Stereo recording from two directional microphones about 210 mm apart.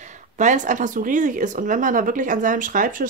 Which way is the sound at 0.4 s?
35° right (ahead or behind).